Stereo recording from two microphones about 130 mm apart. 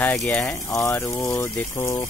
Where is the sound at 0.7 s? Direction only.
20° left (ahead or behind).